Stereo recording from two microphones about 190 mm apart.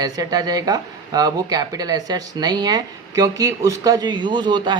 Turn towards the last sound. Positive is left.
turn(degrees=-25)  # may be behind; listen again after turning